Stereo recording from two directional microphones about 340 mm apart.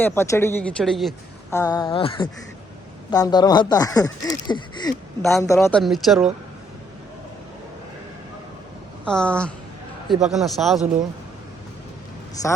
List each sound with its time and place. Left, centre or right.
0.0 s a woman's voice: centre
9.0 s a woman's voice: centre